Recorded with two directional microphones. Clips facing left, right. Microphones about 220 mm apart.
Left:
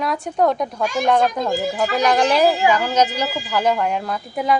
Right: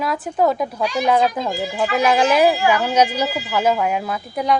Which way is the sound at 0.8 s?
45° left (ahead or behind).